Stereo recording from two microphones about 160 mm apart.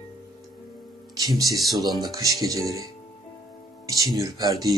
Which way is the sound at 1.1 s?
25° right (ahead or behind).